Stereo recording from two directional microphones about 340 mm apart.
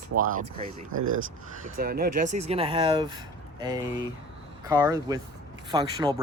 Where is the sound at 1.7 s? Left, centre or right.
Right.